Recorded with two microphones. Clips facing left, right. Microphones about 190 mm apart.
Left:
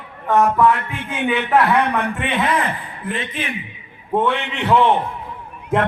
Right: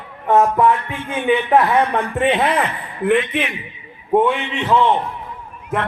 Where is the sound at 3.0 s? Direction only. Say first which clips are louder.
Right 11 dB; 65° right (ahead or behind).